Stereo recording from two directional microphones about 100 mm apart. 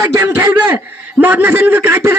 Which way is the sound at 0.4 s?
20° right (ahead or behind).